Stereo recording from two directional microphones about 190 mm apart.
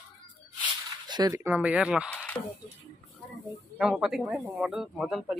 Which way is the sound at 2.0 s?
5° left (ahead or behind).